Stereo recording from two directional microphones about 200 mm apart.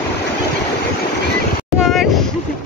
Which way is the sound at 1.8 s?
Centre (ahead or behind).